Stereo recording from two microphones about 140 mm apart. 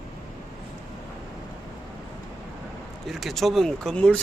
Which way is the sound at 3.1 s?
Centre (ahead or behind).